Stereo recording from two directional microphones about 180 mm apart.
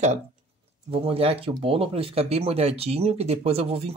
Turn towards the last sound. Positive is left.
turn(degrees=-35)  # may be behind; listen again after turning